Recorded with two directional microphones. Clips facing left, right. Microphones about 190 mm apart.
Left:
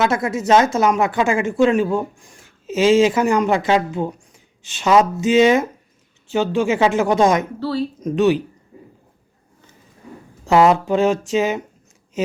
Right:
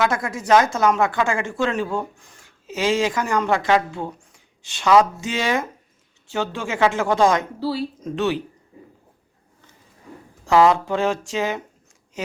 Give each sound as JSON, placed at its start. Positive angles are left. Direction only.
{"t": 0.0, "sound": "speech", "side_deg": 25}
{"t": 7.6, "sound": "speech", "side_deg": -10}
{"t": 8.0, "sound": "speech", "side_deg": 15}
{"t": 10.4, "sound": "speech", "side_deg": 20}